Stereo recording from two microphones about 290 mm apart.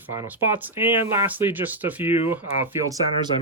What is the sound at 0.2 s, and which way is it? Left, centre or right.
Speech, centre.